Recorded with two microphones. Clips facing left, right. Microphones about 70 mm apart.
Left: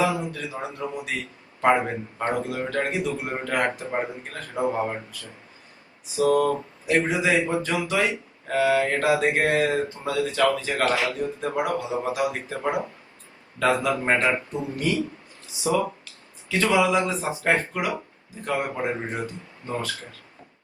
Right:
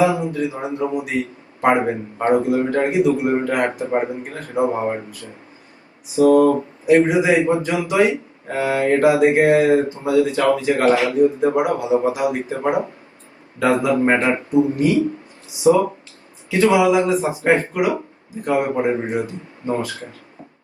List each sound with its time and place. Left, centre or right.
0.0 s a man's voice: right
16.5 s a man's voice: right